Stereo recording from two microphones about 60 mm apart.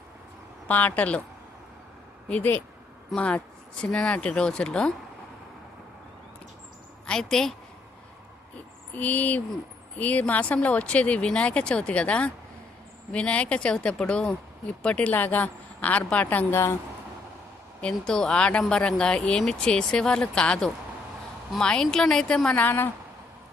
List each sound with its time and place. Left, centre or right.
0.7 s speech: left
2.3 s speech: left
7.1 s speech: centre
9.0 s speech: left
16.5 s speech: left
17.7 s speech: centre
22.5 s a woman's voice: left